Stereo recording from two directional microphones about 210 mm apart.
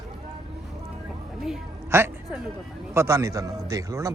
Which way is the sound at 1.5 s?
10° right (ahead or behind).